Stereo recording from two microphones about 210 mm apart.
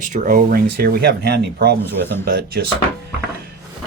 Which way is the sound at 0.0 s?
35° right (ahead or behind).